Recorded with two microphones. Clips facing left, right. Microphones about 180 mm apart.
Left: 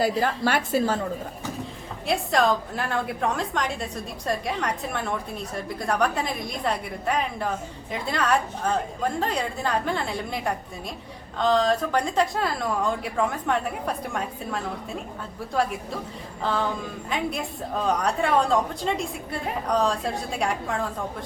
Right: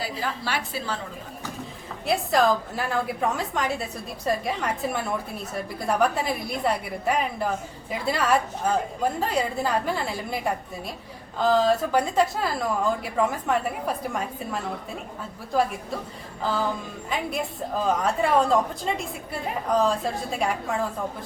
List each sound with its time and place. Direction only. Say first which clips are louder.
0.2 s a woman's voice: left 6 dB; 50° left (ahead or behind)
2.0 s a woman's voice: right 1 dB; centre (ahead or behind)